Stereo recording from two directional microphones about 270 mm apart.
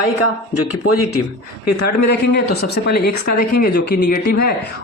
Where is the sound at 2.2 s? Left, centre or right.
Left.